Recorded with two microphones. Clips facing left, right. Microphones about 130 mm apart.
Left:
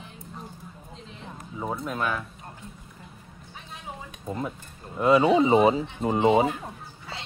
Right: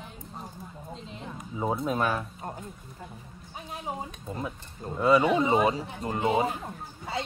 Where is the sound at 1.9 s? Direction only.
30° right (ahead or behind).